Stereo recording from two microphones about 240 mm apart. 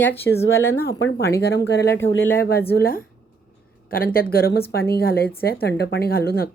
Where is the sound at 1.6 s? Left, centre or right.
Left.